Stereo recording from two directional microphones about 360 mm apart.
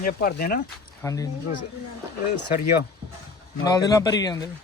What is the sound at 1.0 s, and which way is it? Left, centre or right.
Speech, centre.